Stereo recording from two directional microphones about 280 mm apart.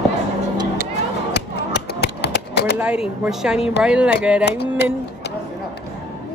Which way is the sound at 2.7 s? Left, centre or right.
Centre.